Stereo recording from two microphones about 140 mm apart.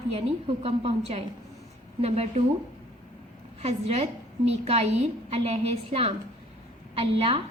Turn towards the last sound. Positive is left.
turn(degrees=-40)  # may be behind; listen again after turning